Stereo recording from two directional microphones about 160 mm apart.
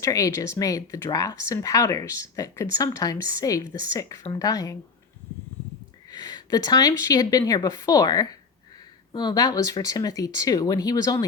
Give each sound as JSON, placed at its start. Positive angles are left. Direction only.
{"t": 0.0, "sound": "speech", "side_deg": 20}
{"t": 6.1, "sound": "speech", "side_deg": 25}